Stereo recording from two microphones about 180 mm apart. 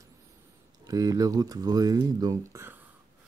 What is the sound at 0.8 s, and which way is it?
Speech, 20° right (ahead or behind).